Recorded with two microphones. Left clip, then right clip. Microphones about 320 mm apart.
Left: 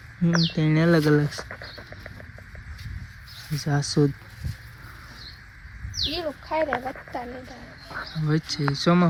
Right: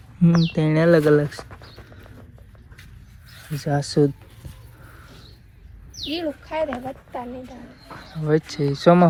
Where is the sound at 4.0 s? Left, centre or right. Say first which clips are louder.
Right 4 dB; right.